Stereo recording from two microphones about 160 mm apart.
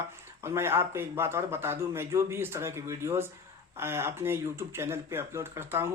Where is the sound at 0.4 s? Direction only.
15° right (ahead or behind).